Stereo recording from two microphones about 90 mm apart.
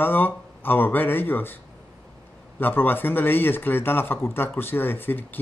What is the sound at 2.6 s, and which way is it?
Speech, 20° left (ahead or behind).